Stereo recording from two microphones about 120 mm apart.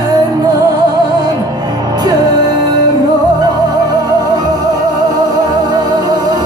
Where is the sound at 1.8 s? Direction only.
35° right (ahead or behind).